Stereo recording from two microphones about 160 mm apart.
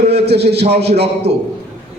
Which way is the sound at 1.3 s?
90° right.